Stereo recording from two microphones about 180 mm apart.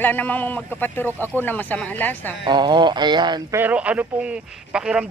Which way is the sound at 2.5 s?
25° right (ahead or behind).